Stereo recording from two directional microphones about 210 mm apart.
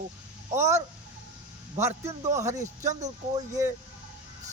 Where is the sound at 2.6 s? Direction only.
35° right (ahead or behind).